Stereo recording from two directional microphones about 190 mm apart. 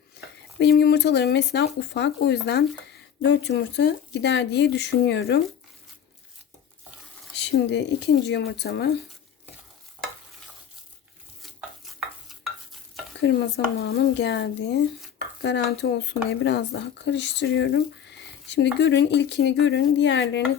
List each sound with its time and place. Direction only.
0.6 s speech: 60° left (ahead or behind)
7.3 s speech: 65° left (ahead or behind)
11.4 s stir: centre (ahead or behind)
13.2 s speech: 65° left (ahead or behind)